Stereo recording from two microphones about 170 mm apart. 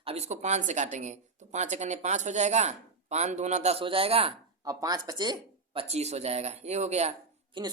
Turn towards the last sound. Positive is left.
turn(degrees=-30)  # may be behind; listen again after turning